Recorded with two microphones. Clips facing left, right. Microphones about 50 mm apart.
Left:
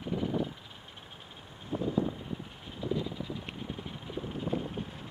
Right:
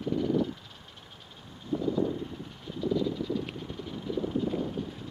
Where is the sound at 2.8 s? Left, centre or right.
Left.